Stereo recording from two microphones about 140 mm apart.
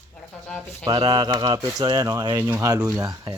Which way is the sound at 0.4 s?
5° left (ahead or behind).